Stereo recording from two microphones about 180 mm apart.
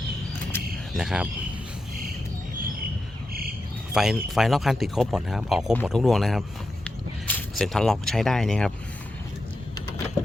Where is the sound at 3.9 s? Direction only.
Centre (ahead or behind).